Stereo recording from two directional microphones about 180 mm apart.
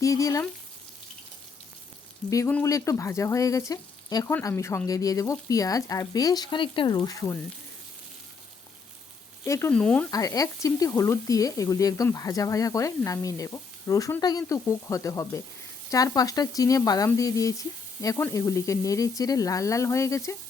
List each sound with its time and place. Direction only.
0.0 s speech: 20° left (ahead or behind)
2.3 s speech: 15° left (ahead or behind)
9.4 s speech: 15° left (ahead or behind)
10.1 s speech: 20° left (ahead or behind)